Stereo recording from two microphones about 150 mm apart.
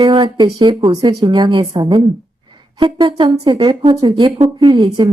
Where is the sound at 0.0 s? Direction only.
30° right (ahead or behind).